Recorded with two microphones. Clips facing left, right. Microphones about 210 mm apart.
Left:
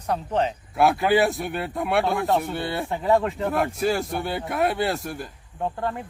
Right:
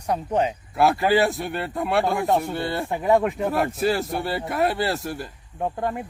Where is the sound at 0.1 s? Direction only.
10° right (ahead or behind).